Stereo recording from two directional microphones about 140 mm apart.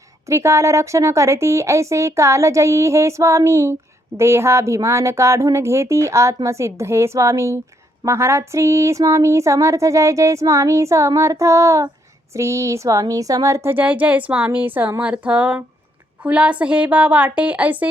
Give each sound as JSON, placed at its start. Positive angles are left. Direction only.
{"t": 0.3, "sound": "speech", "side_deg": -20}